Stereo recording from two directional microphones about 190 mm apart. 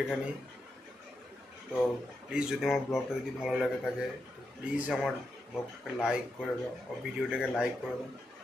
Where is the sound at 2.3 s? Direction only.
5° right (ahead or behind).